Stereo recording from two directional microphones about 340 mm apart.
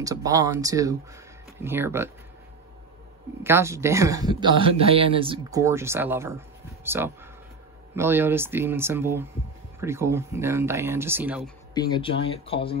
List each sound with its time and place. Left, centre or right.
0.0 s speech: centre
3.4 s speech: centre
11.7 s speech: centre